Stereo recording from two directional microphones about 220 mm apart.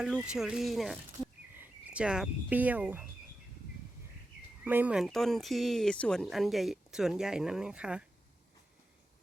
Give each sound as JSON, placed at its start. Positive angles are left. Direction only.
{"t": 0.0, "sound": "speech", "side_deg": -5}
{"t": 4.6, "sound": "speech", "side_deg": -10}